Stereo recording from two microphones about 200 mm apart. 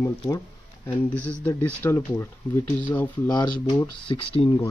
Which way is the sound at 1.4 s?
10° left (ahead or behind).